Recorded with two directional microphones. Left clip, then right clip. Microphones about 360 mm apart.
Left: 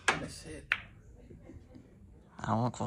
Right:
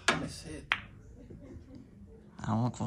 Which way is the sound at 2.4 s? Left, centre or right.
Centre.